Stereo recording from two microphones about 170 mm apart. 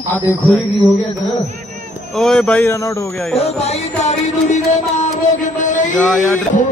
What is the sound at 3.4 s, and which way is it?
Music, 40° left (ahead or behind).